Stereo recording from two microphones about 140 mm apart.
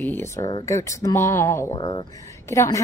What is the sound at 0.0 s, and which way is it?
A woman's voice, 15° left (ahead or behind).